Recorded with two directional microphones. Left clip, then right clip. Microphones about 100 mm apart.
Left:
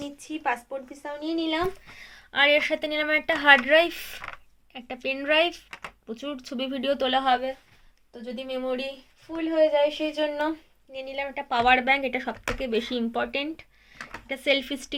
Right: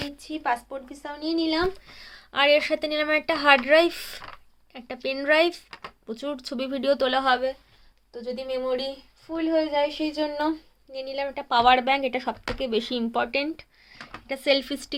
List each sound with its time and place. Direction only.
0.2 s a woman's voice: 25° right (ahead or behind)